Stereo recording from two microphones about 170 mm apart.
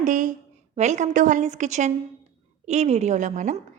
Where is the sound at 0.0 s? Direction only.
50° right (ahead or behind).